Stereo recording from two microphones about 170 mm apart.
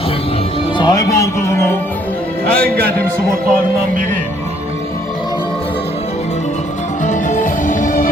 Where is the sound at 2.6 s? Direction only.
60° right (ahead or behind).